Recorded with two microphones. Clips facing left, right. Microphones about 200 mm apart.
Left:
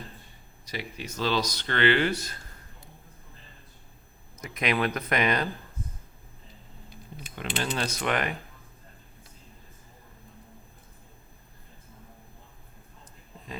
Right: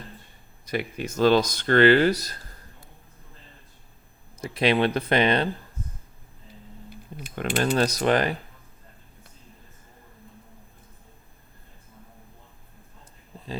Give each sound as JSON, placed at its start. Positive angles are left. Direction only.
{"t": 0.6, "sound": "speech", "side_deg": -55}
{"t": 4.4, "sound": "speech", "side_deg": -30}
{"t": 7.3, "sound": "speech", "side_deg": -45}